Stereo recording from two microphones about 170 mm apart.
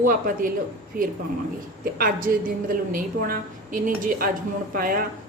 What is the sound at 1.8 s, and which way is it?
A woman's voice, 55° right (ahead or behind).